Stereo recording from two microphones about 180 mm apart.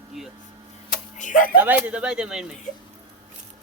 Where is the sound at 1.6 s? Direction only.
10° right (ahead or behind).